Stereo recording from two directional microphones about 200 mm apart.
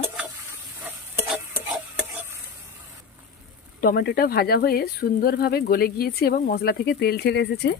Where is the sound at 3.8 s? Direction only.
50° left (ahead or behind).